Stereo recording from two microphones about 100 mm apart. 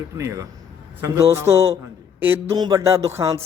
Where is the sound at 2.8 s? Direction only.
30° right (ahead or behind).